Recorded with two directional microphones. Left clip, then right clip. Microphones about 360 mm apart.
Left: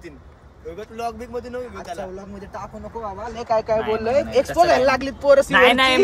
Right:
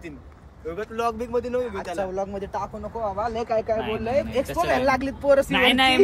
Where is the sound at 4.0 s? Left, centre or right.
Left.